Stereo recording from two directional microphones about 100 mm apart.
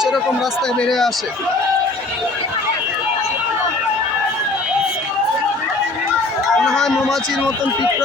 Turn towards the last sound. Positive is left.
turn(degrees=5)  # may be behind; listen again after turning